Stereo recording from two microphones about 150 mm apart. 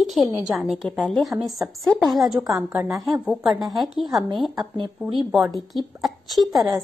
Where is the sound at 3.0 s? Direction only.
5° right (ahead or behind).